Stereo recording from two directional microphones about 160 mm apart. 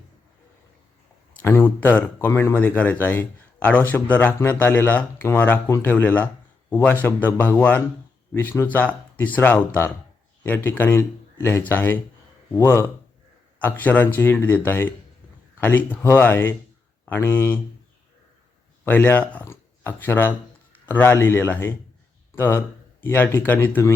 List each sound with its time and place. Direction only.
1.3 s a man's voice: 15° left (ahead or behind)
18.9 s speech: 10° left (ahead or behind)